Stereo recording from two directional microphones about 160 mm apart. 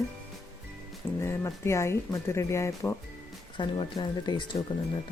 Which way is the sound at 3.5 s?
30° left (ahead or behind).